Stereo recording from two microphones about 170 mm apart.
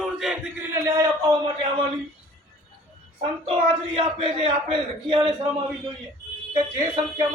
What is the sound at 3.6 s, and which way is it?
Speech, 35° right (ahead or behind).